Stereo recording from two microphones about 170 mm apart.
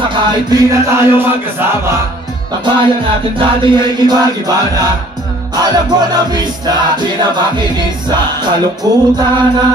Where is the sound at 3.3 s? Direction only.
25° right (ahead or behind).